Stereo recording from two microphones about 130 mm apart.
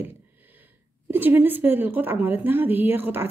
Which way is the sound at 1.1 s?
15° right (ahead or behind).